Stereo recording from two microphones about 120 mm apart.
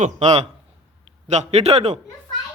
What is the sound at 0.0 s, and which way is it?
Speech, 70° right (ahead or behind).